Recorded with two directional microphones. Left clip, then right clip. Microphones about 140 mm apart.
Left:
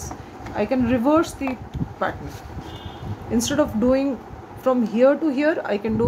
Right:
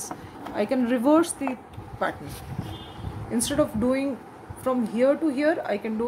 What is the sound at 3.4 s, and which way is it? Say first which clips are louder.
A woman's voice: left 3 dB; 15° left (ahead or behind).